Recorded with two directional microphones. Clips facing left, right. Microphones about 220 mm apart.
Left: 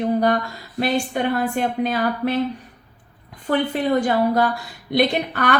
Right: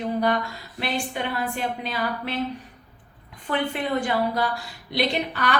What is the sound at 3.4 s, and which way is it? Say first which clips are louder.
A woman's voice: left 6 dB; 40° left (ahead or behind).